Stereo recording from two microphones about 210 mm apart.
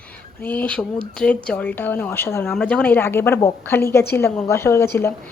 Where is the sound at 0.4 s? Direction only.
5° left (ahead or behind).